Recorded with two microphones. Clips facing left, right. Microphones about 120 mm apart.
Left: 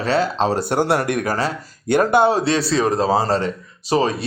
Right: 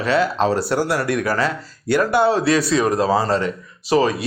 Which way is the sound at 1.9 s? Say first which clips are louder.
Left 1 dB; 20° left (ahead or behind).